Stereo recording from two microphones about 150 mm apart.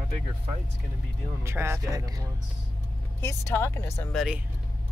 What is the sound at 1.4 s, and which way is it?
Speech, 15° right (ahead or behind).